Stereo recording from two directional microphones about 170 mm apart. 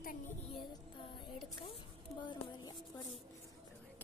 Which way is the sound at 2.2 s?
25° left (ahead or behind).